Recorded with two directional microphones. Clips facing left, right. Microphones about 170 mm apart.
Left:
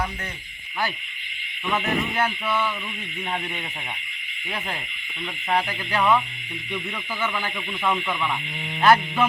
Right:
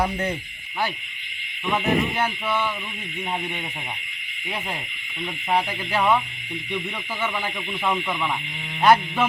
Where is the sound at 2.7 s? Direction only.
10° right (ahead or behind).